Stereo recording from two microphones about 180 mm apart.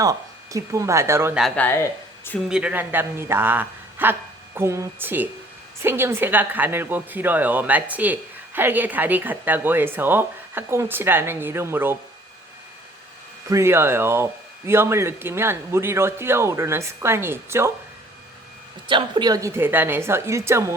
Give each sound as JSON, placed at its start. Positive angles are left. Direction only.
{"t": 0.0, "sound": "a woman's voice", "side_deg": -20}
{"t": 1.4, "sound": "speech", "side_deg": 0}
{"t": 1.6, "sound": "speech", "side_deg": 10}
{"t": 2.5, "sound": "a woman's voice", "side_deg": -5}
{"t": 13.5, "sound": "a woman's voice", "side_deg": -15}
{"t": 18.9, "sound": "a woman's voice", "side_deg": -25}